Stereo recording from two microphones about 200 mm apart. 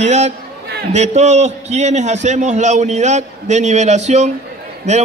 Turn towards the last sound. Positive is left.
turn(degrees=-35)  # may be behind; listen again after turning